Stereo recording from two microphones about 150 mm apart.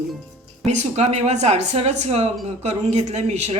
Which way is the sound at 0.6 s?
50° right (ahead or behind).